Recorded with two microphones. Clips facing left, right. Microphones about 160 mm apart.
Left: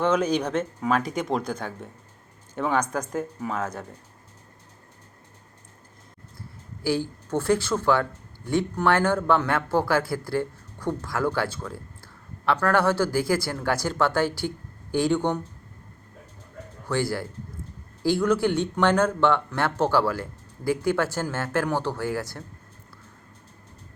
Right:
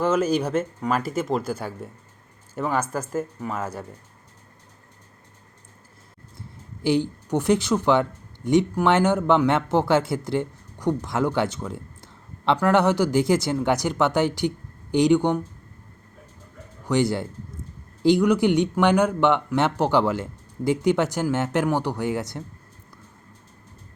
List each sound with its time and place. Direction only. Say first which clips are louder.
0.0 s speech: right 1 dB; 5° right (ahead or behind)
6.8 s speech: right 4 dB; 20° right (ahead or behind)
16.9 s speech: right 4 dB; 20° right (ahead or behind)